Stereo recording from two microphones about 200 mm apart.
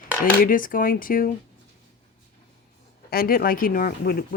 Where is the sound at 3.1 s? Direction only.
50° left (ahead or behind).